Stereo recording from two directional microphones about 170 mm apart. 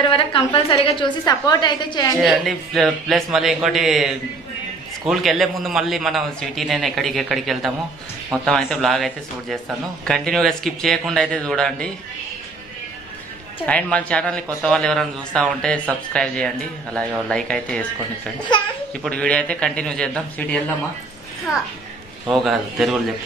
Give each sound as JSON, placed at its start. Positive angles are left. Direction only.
{"t": 0.1, "sound": "a woman's voice", "side_deg": 30}
{"t": 2.2, "sound": "a man's voice", "side_deg": 0}
{"t": 13.7, "sound": "a man's voice", "side_deg": 5}
{"t": 18.5, "sound": "a woman's voice", "side_deg": 25}
{"t": 19.0, "sound": "a man's voice", "side_deg": 5}
{"t": 22.3, "sound": "a man's voice", "side_deg": 0}